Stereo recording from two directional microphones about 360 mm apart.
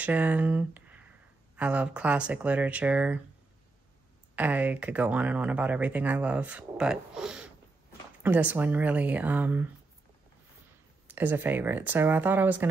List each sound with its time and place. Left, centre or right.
0.0 s speech: centre
4.4 s speech: centre
11.1 s speech: centre